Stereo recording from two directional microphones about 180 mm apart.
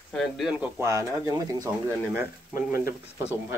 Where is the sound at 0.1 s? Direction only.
Centre (ahead or behind).